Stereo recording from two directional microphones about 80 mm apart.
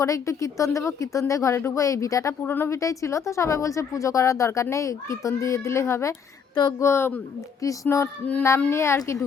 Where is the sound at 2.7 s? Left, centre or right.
Left.